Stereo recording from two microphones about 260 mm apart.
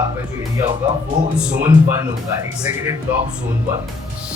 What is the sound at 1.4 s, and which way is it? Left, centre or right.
Speech, centre.